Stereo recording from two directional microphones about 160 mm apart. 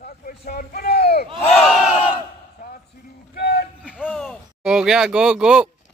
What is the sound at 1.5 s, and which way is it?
Battle cry, centre (ahead or behind).